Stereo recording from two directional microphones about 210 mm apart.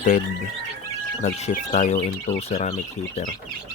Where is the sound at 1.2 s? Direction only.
35° left (ahead or behind).